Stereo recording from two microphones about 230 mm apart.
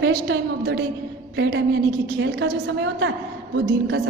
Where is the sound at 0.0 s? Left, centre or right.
Right.